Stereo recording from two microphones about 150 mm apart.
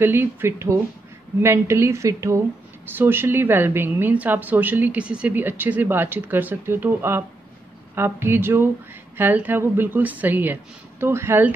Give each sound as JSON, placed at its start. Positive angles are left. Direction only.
{"t": 0.0, "sound": "a woman's voice", "side_deg": -15}